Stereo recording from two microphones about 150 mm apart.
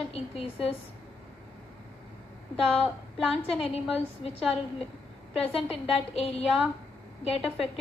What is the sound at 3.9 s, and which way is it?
Speech, 40° left (ahead or behind).